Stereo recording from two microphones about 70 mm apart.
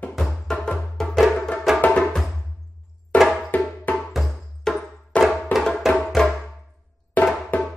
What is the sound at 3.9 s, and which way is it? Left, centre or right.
Music, left.